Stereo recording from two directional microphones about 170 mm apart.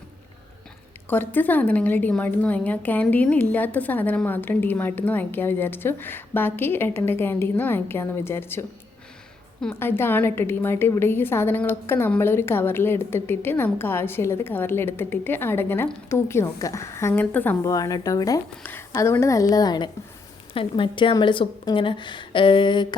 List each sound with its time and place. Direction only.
1.1 s a woman's voice: 10° left (ahead or behind); by 23.0 s 25° left (ahead or behind)